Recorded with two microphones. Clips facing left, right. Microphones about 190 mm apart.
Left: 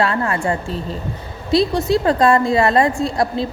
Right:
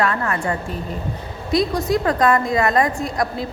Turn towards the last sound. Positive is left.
turn(degrees=30)  # may be behind; listen again after turning